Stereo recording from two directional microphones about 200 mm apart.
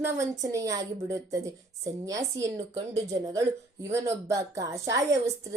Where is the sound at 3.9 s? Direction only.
15° right (ahead or behind).